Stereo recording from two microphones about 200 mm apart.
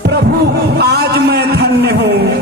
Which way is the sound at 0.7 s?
55° right (ahead or behind).